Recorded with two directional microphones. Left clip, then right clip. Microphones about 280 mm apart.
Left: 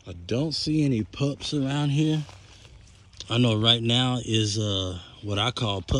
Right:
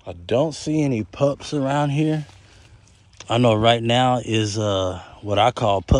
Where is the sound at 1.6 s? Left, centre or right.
Right.